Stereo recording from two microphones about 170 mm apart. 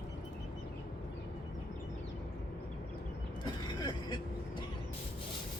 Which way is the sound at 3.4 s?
25° left (ahead or behind).